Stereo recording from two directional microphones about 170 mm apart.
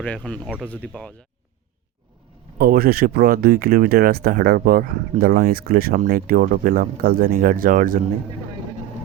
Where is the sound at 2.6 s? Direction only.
65° right (ahead or behind).